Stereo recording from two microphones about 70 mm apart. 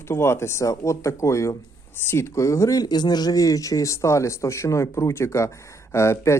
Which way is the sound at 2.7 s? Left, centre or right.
Left.